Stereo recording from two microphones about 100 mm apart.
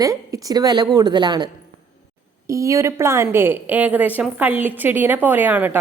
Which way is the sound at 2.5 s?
30° right (ahead or behind).